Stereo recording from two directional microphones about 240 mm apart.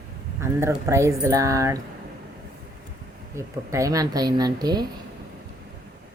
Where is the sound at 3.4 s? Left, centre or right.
Centre.